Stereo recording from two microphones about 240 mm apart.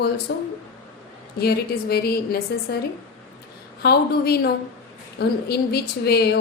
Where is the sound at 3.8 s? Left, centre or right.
Left.